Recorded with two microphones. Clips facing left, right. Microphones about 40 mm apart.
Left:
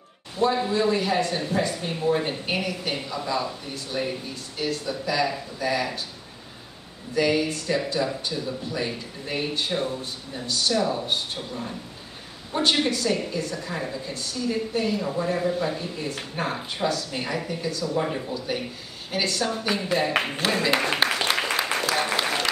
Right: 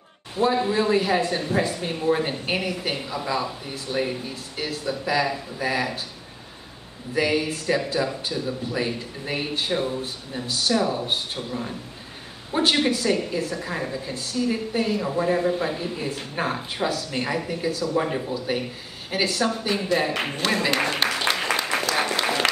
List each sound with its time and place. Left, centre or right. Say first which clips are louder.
0.4 s speech: right 1 dB; centre
7.2 s a woman's voice: even; centre
20.9 s applause: left 1 dB; centre